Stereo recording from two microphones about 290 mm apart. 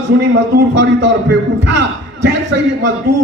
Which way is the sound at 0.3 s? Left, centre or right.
Right.